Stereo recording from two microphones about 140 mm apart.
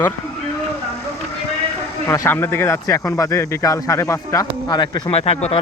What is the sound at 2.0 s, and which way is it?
Speech, 15° left (ahead or behind).